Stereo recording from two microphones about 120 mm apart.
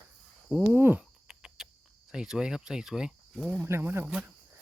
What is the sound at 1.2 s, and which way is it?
Cricket, 5° right (ahead or behind).